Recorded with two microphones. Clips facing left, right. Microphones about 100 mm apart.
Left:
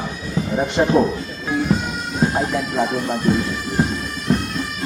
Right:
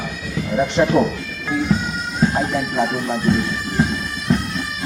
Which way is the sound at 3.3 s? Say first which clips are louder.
Even; centre (ahead or behind).